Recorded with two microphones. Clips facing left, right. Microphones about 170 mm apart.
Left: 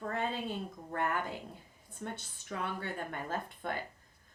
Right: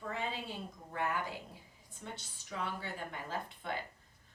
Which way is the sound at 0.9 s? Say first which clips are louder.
Left 2 dB; 55° left (ahead or behind).